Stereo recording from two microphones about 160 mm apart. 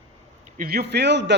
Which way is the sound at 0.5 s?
75° right (ahead or behind).